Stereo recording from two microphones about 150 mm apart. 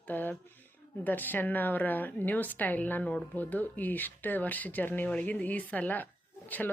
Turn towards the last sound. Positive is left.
turn(degrees=10)  # may be behind; listen again after turning